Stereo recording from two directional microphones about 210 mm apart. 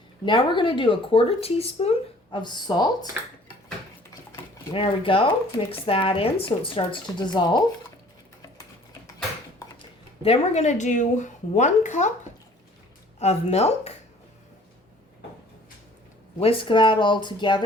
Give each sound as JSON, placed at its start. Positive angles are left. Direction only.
{"t": 0.3, "sound": "speech", "side_deg": 20}
{"t": 4.7, "sound": "speech", "side_deg": 25}
{"t": 10.2, "sound": "a woman's voice", "side_deg": 30}
{"t": 13.1, "sound": "a woman's voice", "side_deg": 30}
{"t": 16.4, "sound": "speech", "side_deg": 25}